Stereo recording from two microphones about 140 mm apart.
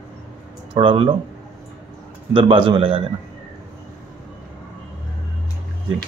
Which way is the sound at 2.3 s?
40° right (ahead or behind).